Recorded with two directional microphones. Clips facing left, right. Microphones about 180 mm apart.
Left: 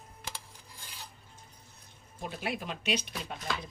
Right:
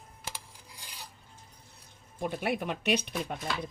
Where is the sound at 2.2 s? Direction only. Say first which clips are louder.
Right 5 dB; 55° right (ahead or behind).